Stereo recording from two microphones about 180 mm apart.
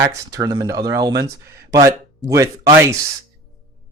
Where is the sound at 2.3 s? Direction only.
15° right (ahead or behind).